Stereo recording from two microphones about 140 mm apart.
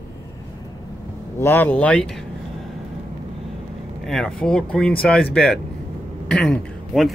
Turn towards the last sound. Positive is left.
turn(degrees=0)  # may be behind; listen again after turning